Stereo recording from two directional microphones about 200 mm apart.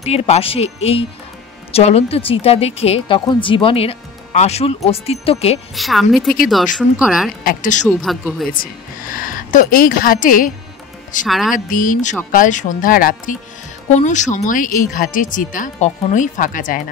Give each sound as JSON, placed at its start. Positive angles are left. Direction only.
{"t": 0.0, "sound": "a woman's voice", "side_deg": 30}
{"t": 5.8, "sound": "a woman's voice", "side_deg": 0}
{"t": 7.4, "sound": "speech", "side_deg": 40}
{"t": 8.0, "sound": "a woman's voice", "side_deg": 0}
{"t": 9.1, "sound": "speech", "side_deg": 45}
{"t": 11.2, "sound": "a woman's voice", "side_deg": 0}
{"t": 11.5, "sound": "a woman's voice", "side_deg": 40}